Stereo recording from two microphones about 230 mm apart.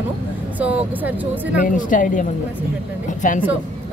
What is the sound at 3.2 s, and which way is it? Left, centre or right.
Speech, left.